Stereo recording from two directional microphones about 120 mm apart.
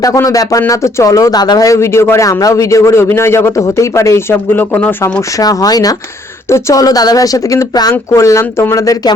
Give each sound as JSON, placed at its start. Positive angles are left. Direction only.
{"t": 0.0, "sound": "a man's voice", "side_deg": 30}
{"t": 5.4, "sound": "a man's voice", "side_deg": 30}